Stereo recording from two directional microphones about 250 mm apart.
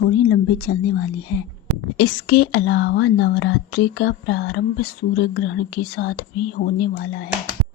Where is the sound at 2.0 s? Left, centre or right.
Left.